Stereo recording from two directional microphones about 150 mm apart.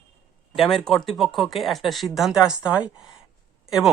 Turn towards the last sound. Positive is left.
turn(degrees=-5)  # may be behind; listen again after turning